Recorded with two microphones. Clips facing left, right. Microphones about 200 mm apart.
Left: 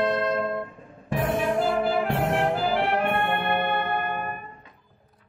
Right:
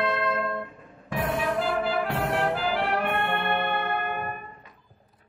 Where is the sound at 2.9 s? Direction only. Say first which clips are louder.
Left 2 dB; 20° left (ahead or behind).